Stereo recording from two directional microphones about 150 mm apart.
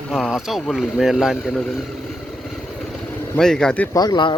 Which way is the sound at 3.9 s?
25° left (ahead or behind).